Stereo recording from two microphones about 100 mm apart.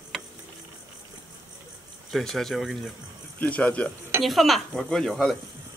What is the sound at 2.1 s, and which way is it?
Speech, 5° left (ahead or behind).